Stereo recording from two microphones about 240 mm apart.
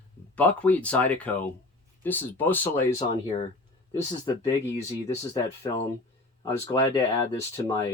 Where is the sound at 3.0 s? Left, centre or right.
Centre.